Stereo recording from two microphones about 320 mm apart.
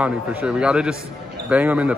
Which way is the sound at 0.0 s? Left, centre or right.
Centre.